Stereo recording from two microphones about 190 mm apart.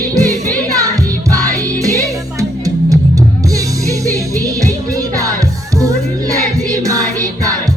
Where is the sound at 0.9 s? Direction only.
15° right (ahead or behind).